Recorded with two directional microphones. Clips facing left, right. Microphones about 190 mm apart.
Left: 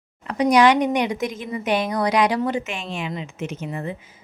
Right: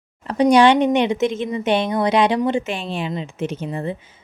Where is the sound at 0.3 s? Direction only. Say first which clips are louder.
Right 3 dB; 30° right (ahead or behind).